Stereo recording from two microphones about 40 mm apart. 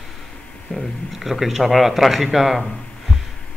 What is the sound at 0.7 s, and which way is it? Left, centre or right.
Speech, centre.